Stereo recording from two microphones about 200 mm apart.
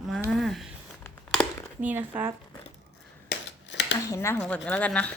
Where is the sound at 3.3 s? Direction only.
60° left (ahead or behind).